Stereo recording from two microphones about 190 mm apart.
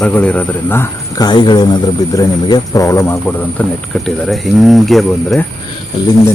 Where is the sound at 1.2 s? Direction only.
25° left (ahead or behind); by 5.4 s centre (ahead or behind).